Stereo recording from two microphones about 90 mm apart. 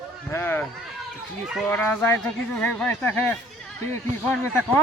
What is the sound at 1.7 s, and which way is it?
Speech, 20° left (ahead or behind).